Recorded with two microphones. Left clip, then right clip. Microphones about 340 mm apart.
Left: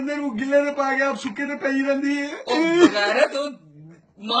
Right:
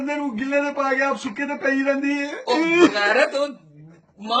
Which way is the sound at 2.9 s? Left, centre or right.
Centre.